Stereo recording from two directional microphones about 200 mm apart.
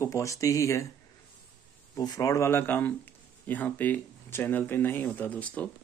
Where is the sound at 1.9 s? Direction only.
15° left (ahead or behind).